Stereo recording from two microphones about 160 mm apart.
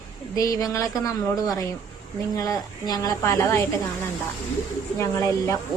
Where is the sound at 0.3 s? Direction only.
20° left (ahead or behind).